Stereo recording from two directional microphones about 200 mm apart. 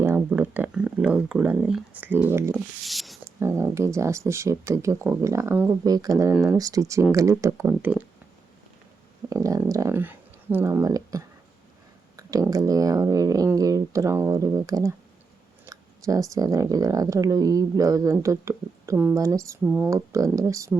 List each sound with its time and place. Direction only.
0.0 s speech: 10° right (ahead or behind)
3.4 s speech: 15° right (ahead or behind)
9.3 s speech: 15° right (ahead or behind)